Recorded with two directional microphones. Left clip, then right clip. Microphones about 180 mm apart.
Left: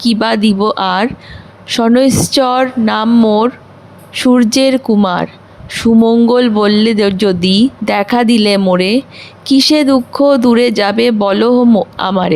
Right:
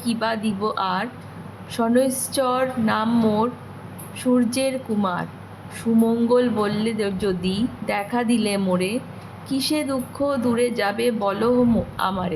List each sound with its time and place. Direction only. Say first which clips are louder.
0.0 s speech: left 11 dB; 50° left (ahead or behind)